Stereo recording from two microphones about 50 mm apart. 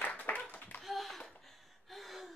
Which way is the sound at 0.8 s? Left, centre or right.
Centre.